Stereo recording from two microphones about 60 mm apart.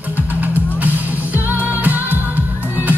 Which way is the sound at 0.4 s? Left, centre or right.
Right.